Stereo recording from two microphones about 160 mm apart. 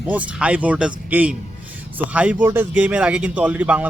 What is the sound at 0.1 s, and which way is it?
A man's voice, 10° right (ahead or behind).